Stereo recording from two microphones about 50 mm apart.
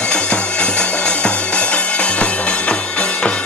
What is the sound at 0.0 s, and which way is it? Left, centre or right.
Music, centre.